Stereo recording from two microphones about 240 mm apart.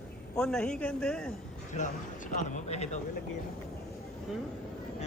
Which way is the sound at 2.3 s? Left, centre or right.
Left.